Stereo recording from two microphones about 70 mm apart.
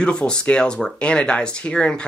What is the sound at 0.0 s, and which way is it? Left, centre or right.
Speech, centre.